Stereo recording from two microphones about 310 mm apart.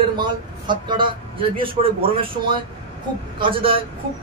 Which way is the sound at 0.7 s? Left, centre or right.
Centre.